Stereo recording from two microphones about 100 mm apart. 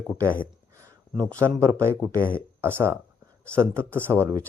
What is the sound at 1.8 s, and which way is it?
Speech, 25° right (ahead or behind).